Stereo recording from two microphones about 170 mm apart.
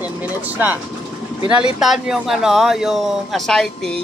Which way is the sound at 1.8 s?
Centre (ahead or behind).